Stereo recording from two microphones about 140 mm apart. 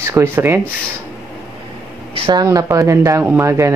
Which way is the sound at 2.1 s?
40° right (ahead or behind).